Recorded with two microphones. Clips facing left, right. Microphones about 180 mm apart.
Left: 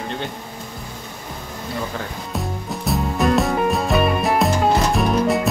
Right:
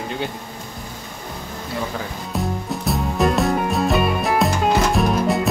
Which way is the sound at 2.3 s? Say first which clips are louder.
Right 3 dB; centre (ahead or behind).